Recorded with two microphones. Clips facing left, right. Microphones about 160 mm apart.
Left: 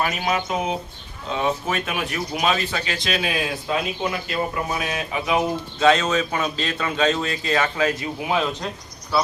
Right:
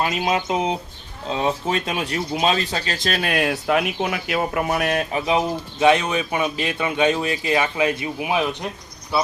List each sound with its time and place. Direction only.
0.0 s bird: 20° right (ahead or behind)
1.3 s speech: 30° right (ahead or behind); by 5.0 s 60° right (ahead or behind)
5.1 s bird: 25° right (ahead or behind)
5.8 s speech: 15° right (ahead or behind)